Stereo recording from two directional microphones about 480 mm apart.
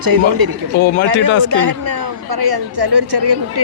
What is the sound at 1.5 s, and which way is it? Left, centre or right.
A woman's voice, right.